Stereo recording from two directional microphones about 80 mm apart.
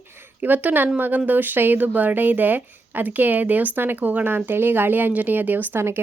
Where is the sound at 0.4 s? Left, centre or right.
Right.